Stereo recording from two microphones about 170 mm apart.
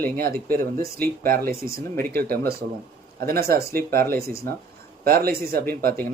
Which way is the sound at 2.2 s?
60° right (ahead or behind).